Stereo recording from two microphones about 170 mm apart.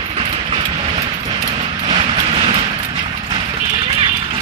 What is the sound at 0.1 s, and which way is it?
Vehicle, 35° right (ahead or behind).